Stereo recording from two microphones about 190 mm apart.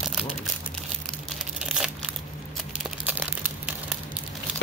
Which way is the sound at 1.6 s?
5° right (ahead or behind).